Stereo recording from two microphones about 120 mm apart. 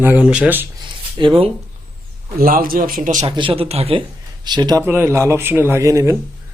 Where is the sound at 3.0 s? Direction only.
90° right.